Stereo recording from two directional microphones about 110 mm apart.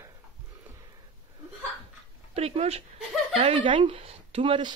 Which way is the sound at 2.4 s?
70° right (ahead or behind).